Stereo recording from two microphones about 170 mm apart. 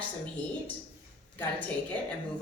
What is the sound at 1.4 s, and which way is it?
Speech, 10° left (ahead or behind).